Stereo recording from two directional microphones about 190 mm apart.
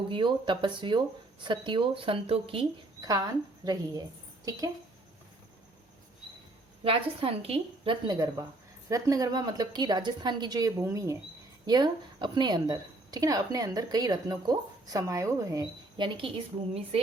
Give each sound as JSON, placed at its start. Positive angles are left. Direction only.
{"t": 0.1, "sound": "a woman's voice", "side_deg": -25}
{"t": 6.8, "sound": "a woman's voice", "side_deg": -30}